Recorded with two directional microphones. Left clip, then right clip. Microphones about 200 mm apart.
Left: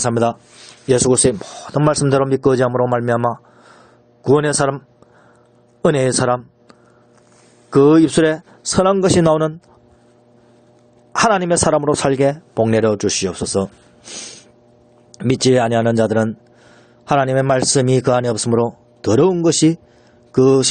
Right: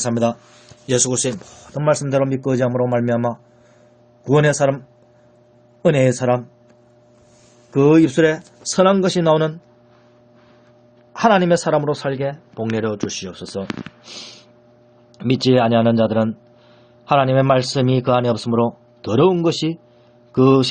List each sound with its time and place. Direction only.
0.0 s a man's voice: 50° left (ahead or behind)
5.8 s a man's voice: 50° left (ahead or behind)
7.7 s a man's voice: 50° left (ahead or behind)
11.1 s a man's voice: 60° left (ahead or behind)